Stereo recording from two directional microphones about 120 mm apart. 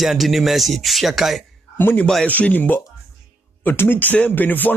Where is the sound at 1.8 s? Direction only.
20° left (ahead or behind).